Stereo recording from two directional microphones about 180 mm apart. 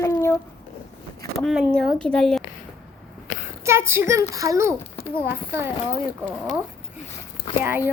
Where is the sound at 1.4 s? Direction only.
Centre (ahead or behind).